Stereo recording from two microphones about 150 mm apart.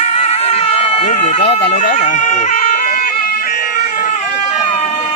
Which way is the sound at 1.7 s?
55° left (ahead or behind).